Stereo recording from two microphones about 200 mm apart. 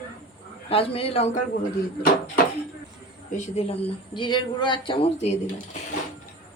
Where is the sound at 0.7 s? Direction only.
30° left (ahead or behind).